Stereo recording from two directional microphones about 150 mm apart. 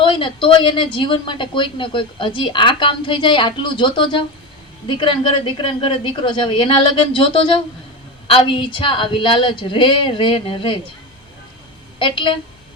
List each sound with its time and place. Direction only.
0.0 s a woman's voice: 35° left (ahead or behind)
11.9 s a woman's voice: 35° left (ahead or behind)